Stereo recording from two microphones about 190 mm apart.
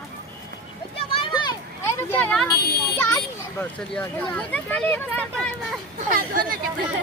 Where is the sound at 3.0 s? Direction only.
10° left (ahead or behind).